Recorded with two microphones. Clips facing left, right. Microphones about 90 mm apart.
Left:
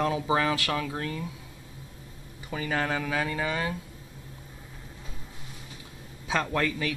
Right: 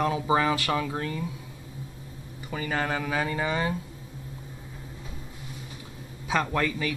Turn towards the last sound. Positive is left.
turn(degrees=-5)  # may be behind; listen again after turning